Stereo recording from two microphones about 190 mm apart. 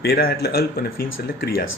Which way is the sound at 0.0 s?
55° left (ahead or behind).